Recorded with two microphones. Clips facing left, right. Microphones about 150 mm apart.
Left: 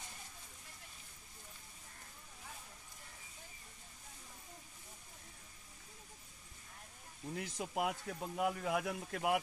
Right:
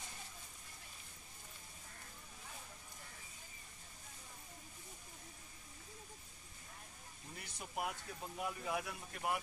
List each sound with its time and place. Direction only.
7.3 s speech: 90° left